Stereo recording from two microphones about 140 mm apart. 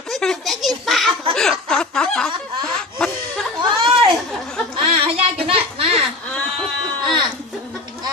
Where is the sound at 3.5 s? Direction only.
35° right (ahead or behind).